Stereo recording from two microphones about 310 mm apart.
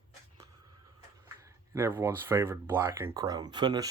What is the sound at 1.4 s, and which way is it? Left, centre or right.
Speech, centre.